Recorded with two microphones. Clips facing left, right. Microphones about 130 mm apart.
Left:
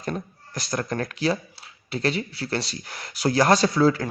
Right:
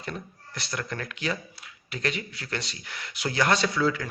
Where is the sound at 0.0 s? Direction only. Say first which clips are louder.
Left 6 dB; 40° left (ahead or behind).